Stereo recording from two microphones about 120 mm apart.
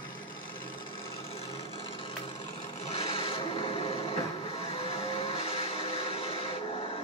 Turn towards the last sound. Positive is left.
turn(degrees=50)  # may be behind; listen again after turning